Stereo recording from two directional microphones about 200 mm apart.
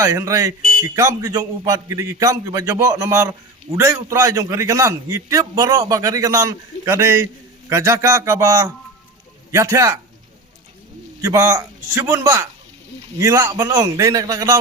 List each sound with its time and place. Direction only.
0.0 s a man's voice: 15° right (ahead or behind)
11.2 s a man's voice: 15° right (ahead or behind)